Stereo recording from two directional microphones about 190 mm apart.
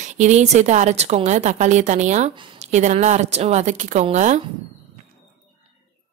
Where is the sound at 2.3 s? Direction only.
25° right (ahead or behind).